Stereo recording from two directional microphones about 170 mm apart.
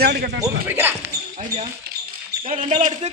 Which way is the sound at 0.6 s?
10° right (ahead or behind).